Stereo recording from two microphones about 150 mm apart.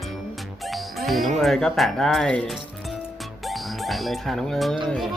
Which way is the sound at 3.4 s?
Centre (ahead or behind).